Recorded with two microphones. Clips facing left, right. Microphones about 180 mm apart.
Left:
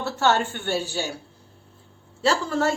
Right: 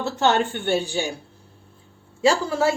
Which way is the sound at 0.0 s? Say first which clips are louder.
Right 2 dB; 15° right (ahead or behind).